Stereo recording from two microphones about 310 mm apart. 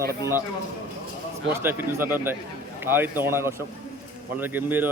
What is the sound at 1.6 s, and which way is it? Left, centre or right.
Speech, centre.